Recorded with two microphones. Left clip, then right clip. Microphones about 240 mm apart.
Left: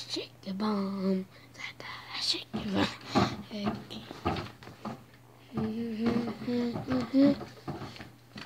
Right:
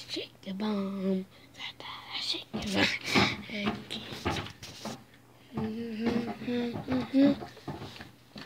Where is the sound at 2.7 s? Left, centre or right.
Centre.